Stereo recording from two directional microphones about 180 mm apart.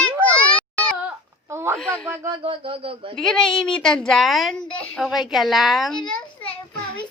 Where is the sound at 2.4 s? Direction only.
30° right (ahead or behind).